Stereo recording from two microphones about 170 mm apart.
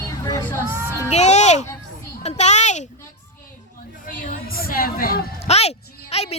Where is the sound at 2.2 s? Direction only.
40° left (ahead or behind).